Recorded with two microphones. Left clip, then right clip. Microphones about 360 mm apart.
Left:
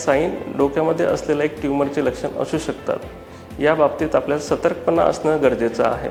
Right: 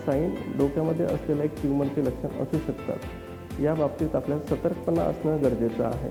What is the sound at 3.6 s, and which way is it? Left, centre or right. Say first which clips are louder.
Speech: left 10 dB; centre.